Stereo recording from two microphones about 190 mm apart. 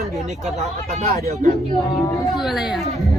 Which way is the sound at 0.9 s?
50° right (ahead or behind).